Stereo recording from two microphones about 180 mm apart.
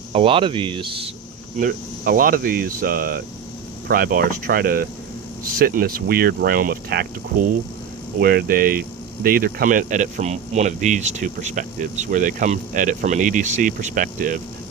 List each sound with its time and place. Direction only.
0.1 s speech: 30° right (ahead or behind)
1.5 s speech: 50° right (ahead or behind)
8.2 s speech: 55° right (ahead or behind)